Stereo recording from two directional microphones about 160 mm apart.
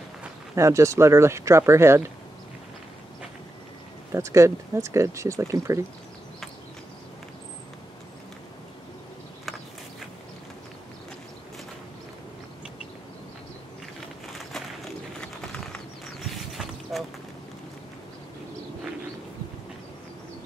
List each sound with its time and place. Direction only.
0.6 s speech: 20° right (ahead or behind)
4.1 s speech: 20° right (ahead or behind)
15.1 s a sound: 5° left (ahead or behind)